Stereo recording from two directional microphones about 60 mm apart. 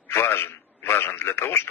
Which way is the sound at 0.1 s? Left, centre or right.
Left.